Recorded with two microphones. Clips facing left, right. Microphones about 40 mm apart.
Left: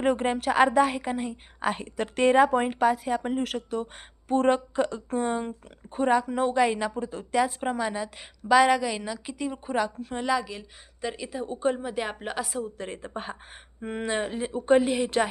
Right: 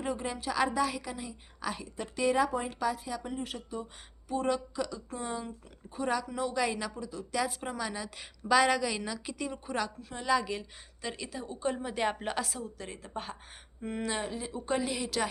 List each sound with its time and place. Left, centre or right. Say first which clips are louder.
0.0 s a woman's voice: left 10 dB; left
4.3 s a woman's voice: left 8 dB; left
6.1 s a woman's voice: left 8 dB; left
6.9 s a woman's voice: left 7 dB; left
7.3 s a woman's voice: left 8 dB; left
10.0 s a woman's voice: left 9 dB; left
10.6 s speech: left 6 dB; centre
12.5 s a woman's voice: left 7 dB; left
12.7 s a woman's voice: left 5 dB; left